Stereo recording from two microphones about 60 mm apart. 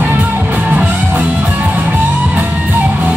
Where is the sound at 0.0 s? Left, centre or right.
Right.